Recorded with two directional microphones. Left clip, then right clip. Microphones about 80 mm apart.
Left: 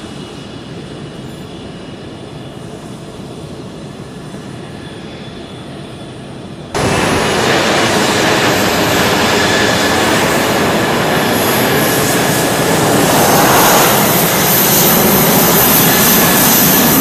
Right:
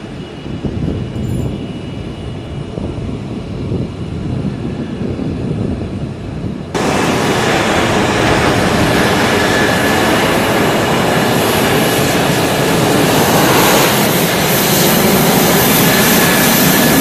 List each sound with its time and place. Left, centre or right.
6.7 s vehicle: left
8.9 s train: centre
10.0 s train: centre
11.4 s vehicle: left